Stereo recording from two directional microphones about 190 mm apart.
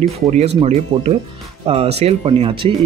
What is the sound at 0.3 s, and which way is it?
Speech, 35° right (ahead or behind).